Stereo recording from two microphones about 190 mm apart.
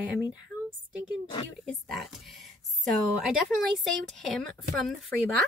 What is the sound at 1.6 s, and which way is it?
Speech, centre (ahead or behind).